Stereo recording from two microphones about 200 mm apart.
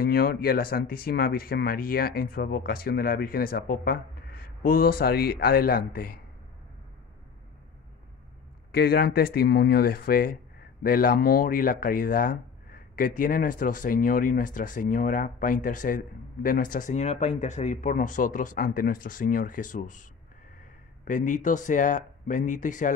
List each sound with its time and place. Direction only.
0.0 s speech: 50° left (ahead or behind)
8.7 s speech: 50° left (ahead or behind)